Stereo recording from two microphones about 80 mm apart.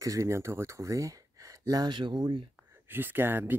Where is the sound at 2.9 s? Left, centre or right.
Right.